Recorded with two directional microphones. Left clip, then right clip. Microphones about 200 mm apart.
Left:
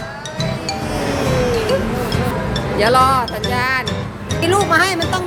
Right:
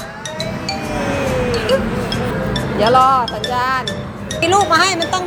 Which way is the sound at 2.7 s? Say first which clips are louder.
Right 1 dB; 10° left (ahead or behind).